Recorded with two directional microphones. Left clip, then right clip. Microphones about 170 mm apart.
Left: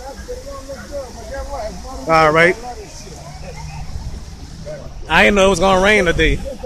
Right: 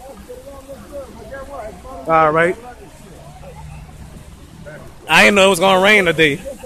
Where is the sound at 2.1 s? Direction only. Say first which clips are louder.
Left 2 dB; 5° right (ahead or behind).